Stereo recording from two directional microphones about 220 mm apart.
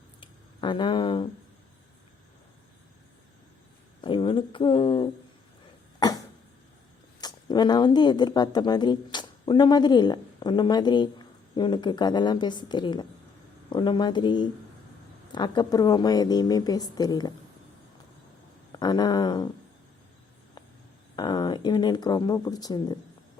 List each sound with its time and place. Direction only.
0.2 s a sound: 20° left (ahead or behind)
4.0 s speech: 25° left (ahead or behind)
7.2 s a woman's voice: 20° left (ahead or behind)
18.8 s speech: 20° left (ahead or behind)
21.2 s speech: 20° left (ahead or behind)